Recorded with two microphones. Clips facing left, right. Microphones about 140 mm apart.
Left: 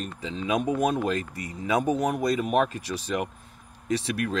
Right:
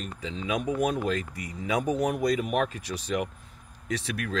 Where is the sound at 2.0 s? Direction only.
30° left (ahead or behind).